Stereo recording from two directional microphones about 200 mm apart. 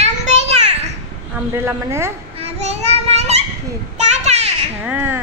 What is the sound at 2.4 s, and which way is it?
Child singing, 30° right (ahead or behind).